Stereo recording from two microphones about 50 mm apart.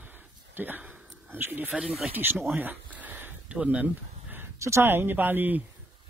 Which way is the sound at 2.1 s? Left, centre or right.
Right.